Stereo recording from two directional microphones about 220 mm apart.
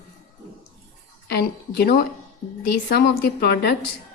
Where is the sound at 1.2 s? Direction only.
45° left (ahead or behind).